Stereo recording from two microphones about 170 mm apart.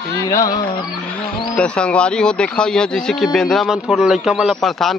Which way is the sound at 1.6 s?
5° left (ahead or behind).